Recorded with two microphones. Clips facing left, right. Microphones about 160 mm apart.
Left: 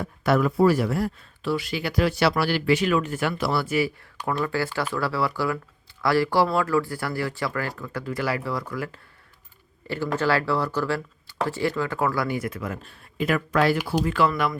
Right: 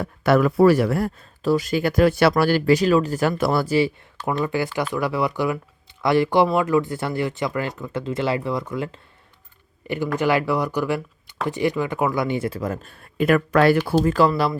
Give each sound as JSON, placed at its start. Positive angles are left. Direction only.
{"t": 0.0, "sound": "speech", "side_deg": -70}
{"t": 3.7, "sound": "speech", "side_deg": -25}
{"t": 13.1, "sound": "speech", "side_deg": -55}
{"t": 14.0, "sound": "speech", "side_deg": -40}